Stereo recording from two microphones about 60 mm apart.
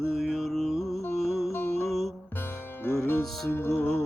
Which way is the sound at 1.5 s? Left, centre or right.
Left.